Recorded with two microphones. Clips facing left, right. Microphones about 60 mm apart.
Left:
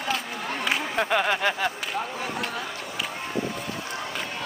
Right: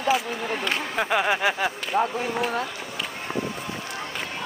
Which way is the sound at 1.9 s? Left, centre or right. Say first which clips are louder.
Right 7 dB; right.